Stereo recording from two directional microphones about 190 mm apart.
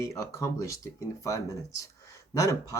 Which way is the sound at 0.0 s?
15° left (ahead or behind).